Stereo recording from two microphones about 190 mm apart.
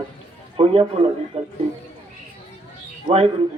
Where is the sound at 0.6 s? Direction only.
30° right (ahead or behind).